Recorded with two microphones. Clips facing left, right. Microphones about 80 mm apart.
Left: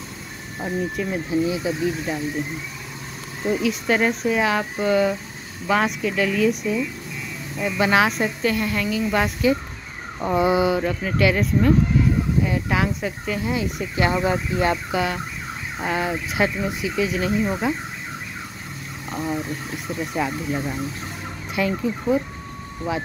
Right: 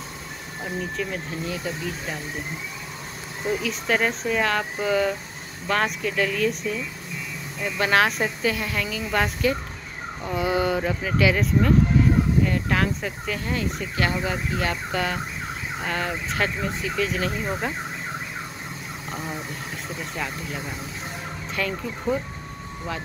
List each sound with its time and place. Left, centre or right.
0.7 s speech: centre
3.4 s speech: centre
10.3 s speech: left
10.6 s speech: centre
14.0 s speech: left
14.9 s speech: centre
19.0 s speech: centre
20.2 s speech: centre
21.5 s speech: centre